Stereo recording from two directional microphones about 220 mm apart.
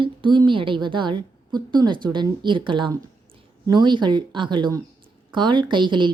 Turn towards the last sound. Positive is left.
turn(degrees=-20)  # may be behind; listen again after turning